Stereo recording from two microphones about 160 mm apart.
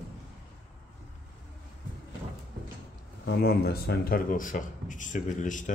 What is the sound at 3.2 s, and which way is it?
Speech, 75° left (ahead or behind).